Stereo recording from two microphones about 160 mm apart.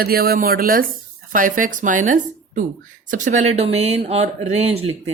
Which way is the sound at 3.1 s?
50° right (ahead or behind).